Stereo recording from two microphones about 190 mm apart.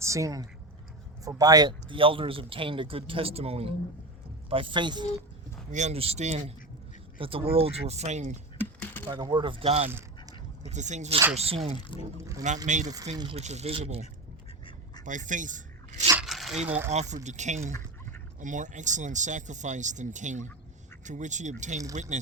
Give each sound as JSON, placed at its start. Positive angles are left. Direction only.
{"t": 0.0, "sound": "speech", "side_deg": -15}
{"t": 5.7, "sound": "speech", "side_deg": -35}
{"t": 8.5, "sound": "a sound", "side_deg": 10}
{"t": 9.0, "sound": "speech", "side_deg": -25}
{"t": 12.1, "sound": "speech", "side_deg": -15}
{"t": 12.6, "sound": "speech", "side_deg": -40}
{"t": 15.0, "sound": "speech", "side_deg": -40}
{"t": 16.2, "sound": "a sound", "side_deg": 0}
{"t": 16.9, "sound": "speech", "side_deg": -35}
{"t": 17.7, "sound": "a sound", "side_deg": 15}
{"t": 18.3, "sound": "speech", "side_deg": -40}